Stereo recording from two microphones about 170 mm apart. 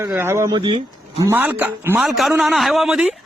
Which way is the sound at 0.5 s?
25° right (ahead or behind).